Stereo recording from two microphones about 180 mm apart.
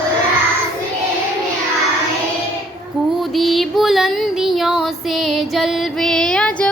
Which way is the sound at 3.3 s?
Centre (ahead or behind).